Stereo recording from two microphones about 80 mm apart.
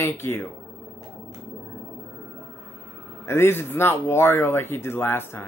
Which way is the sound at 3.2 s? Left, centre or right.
Left.